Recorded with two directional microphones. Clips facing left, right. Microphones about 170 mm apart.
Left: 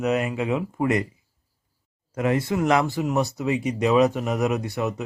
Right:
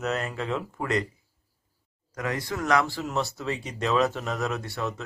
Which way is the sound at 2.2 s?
25° left (ahead or behind).